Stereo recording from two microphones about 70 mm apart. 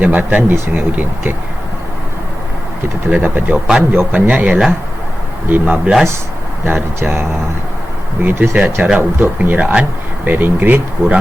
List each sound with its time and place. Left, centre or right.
0.0 s a man's voice: right
3.1 s a man's voice: right
7.0 s a man's voice: right